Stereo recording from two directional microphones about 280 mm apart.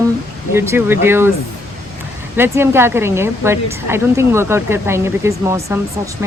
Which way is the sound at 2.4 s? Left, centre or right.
Centre.